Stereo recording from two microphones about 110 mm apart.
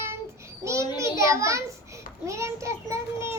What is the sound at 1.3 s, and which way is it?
A child's voice, 30° right (ahead or behind).